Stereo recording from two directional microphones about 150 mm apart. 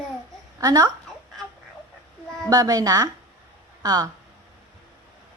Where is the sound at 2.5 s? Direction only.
25° right (ahead or behind).